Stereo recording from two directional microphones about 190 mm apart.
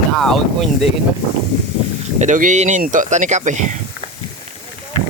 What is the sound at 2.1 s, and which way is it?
Speech, 40° right (ahead or behind).